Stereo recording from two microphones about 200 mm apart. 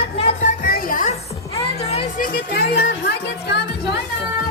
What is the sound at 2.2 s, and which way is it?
Music, 50° left (ahead or behind).